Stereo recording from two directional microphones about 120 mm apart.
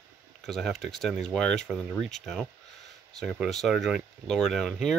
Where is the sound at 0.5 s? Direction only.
Centre (ahead or behind).